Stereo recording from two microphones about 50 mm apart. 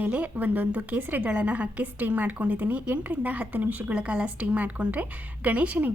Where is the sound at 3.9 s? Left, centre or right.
Right.